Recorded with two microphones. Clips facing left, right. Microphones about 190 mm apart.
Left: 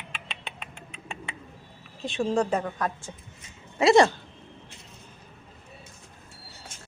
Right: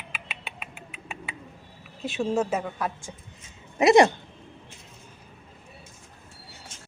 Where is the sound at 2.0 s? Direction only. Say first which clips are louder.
Even; 5° right (ahead or behind).